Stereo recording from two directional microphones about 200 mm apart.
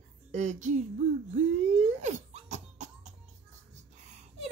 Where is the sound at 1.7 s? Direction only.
35° right (ahead or behind).